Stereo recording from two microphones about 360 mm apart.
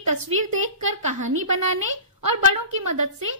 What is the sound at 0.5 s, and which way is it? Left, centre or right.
A woman's voice, right.